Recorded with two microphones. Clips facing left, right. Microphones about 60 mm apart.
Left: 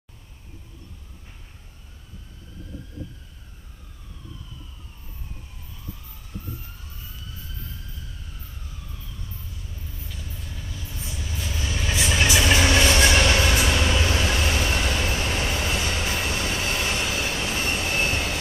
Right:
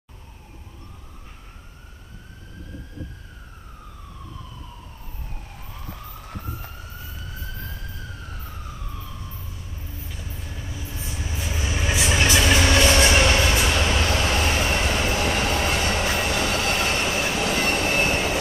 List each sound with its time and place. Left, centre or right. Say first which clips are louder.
5.7 s emergency vehicle: right 4 dB; right
10.0 s train: right 1 dB; right
12.4 s vehicle: even; centre
12.8 s train: right 1 dB; right
13.5 s vehicle: right 1 dB; centre
14.2 s vehicle: right 2 dB; right
15.1 s train: right 4 dB; right
16.3 s train: right 4 dB; right
16.7 s train: right 3 dB; right
17.4 s train: right 4 dB; right
18.0 s train: right 3 dB; right